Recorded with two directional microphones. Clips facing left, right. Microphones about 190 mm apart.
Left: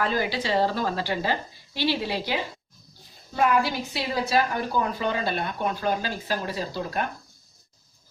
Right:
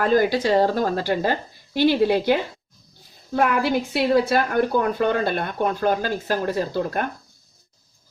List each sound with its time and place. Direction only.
0.0 s a woman's voice: 45° right (ahead or behind)